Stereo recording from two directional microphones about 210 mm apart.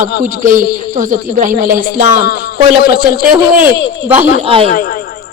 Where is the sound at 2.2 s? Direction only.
50° left (ahead or behind).